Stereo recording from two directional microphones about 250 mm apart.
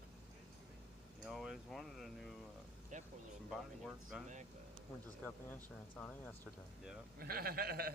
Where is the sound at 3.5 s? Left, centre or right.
Centre.